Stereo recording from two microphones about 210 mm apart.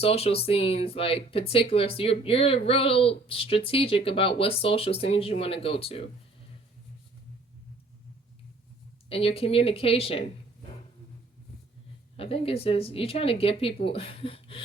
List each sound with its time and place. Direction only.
0.0 s speech: 30° left (ahead or behind)
9.0 s speech: 25° left (ahead or behind)
12.1 s speech: 25° left (ahead or behind)